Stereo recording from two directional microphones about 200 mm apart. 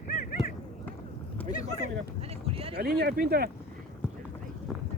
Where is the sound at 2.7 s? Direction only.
50° right (ahead or behind).